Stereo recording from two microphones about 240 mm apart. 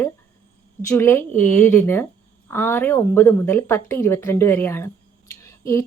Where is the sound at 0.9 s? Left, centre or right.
Centre.